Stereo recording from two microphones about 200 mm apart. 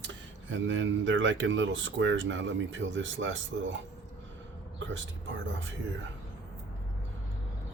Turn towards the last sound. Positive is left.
turn(degrees=-70)  # may be behind; listen again after turning